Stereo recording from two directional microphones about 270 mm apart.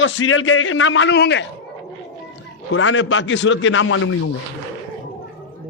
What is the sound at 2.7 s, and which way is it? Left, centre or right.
A man's voice, left.